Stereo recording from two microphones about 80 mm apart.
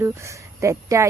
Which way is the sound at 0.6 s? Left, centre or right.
Right.